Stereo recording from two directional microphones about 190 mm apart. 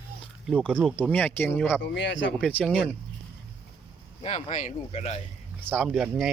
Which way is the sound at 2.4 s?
5° left (ahead or behind).